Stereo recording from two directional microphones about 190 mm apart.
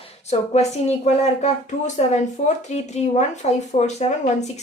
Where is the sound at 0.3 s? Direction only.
35° left (ahead or behind).